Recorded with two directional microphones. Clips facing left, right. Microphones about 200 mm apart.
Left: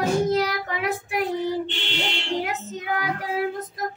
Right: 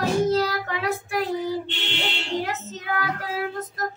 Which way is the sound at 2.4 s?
15° left (ahead or behind).